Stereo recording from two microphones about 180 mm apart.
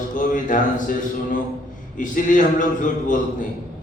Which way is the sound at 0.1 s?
45° left (ahead or behind).